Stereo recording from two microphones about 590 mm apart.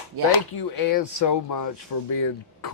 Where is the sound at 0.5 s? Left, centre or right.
Left.